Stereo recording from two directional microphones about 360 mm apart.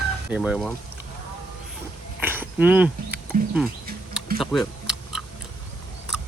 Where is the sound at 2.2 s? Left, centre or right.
Centre.